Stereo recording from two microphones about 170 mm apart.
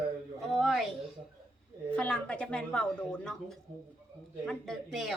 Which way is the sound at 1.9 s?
5° left (ahead or behind).